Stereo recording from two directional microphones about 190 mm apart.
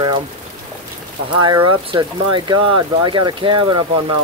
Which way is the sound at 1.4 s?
25° right (ahead or behind).